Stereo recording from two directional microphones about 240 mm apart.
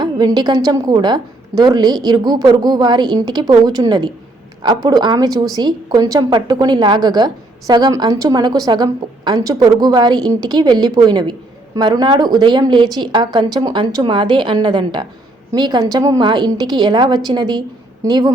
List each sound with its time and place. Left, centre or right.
0.0 s a woman's voice: centre